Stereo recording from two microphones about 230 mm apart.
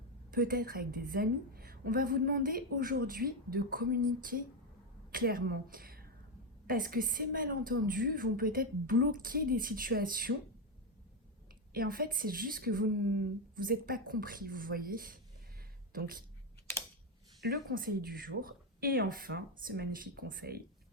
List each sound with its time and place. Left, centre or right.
0.3 s a woman's voice: right
11.7 s a woman's voice: right
17.4 s a woman's voice: right